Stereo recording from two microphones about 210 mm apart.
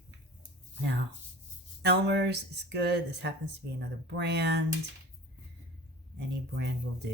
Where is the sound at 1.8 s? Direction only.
55° right (ahead or behind).